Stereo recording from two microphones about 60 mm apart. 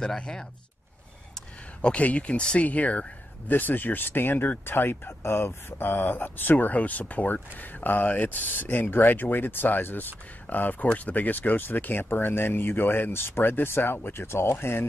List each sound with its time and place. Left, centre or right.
0.0 s speech: centre
1.8 s speech: left